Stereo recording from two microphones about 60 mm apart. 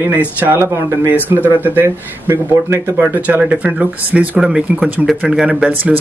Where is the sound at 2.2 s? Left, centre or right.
Right.